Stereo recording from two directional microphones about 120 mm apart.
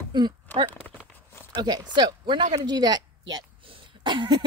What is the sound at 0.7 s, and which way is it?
Walk, 15° left (ahead or behind).